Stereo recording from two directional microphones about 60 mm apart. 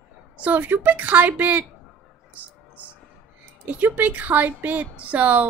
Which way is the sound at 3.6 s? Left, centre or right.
Right.